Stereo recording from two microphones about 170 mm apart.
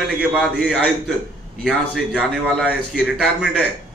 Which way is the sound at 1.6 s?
5° right (ahead or behind).